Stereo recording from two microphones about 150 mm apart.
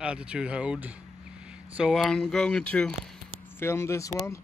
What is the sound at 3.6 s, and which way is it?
Speech, 15° left (ahead or behind).